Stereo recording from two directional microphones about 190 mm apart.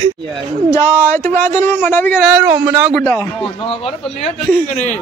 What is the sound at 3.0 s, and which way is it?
Speech, 10° left (ahead or behind).